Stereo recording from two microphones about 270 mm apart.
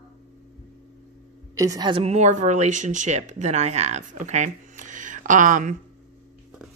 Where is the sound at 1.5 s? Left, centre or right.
Centre; by 5.7 s right.